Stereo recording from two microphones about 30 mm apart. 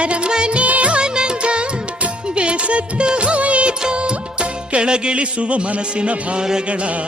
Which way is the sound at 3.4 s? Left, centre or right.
Right.